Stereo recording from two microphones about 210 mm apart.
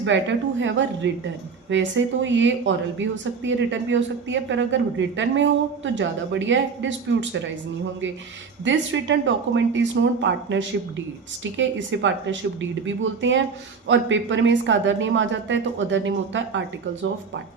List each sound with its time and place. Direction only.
0.0 s speech: 60° right (ahead or behind)
2.2 s speech: 60° right (ahead or behind)
8.6 s speech: 60° right (ahead or behind)